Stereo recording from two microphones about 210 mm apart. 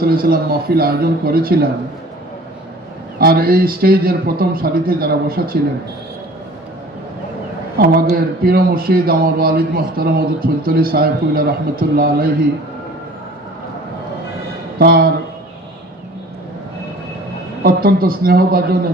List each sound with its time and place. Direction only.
0.0 s a man's voice: 45° right (ahead or behind)
3.2 s a man's voice: 45° right (ahead or behind)
8.1 s a man's voice: 45° right (ahead or behind)
14.8 s a man's voice: 45° right (ahead or behind)
17.6 s a man's voice: 45° right (ahead or behind)